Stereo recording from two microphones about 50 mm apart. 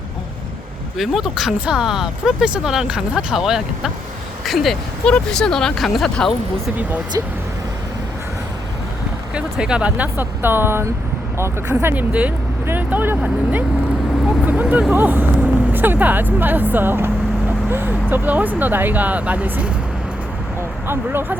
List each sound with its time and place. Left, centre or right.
0.9 s speech: centre
5.0 s speech: centre
5.7 s speech: centre
9.3 s speech: centre
10.0 s speech: right
11.9 s speech: right
14.9 s speech: right
20.6 s a sound: right